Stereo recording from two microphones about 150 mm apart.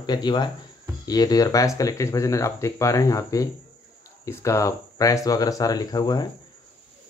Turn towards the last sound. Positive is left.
turn(degrees=25)  # may be behind; listen again after turning